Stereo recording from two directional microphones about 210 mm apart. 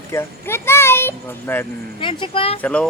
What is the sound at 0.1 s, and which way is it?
A child's voice, 10° left (ahead or behind).